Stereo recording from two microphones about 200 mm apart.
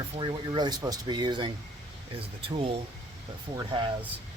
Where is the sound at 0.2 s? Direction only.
25° right (ahead or behind).